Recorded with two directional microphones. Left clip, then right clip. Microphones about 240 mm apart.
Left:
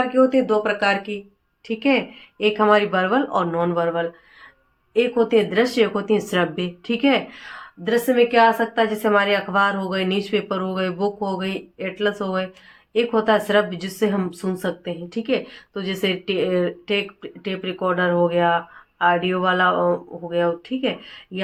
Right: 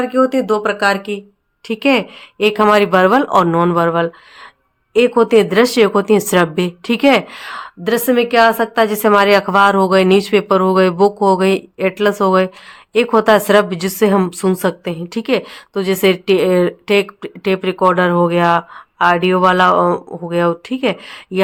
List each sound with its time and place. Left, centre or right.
0.1 s a woman's voice: right